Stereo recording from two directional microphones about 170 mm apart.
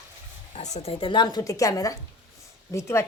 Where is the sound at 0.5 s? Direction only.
40° left (ahead or behind).